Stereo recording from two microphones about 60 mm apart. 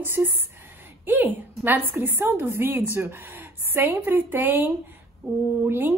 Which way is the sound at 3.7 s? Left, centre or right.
Right.